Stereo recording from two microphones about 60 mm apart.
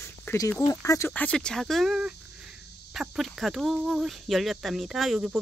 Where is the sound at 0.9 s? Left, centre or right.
Left.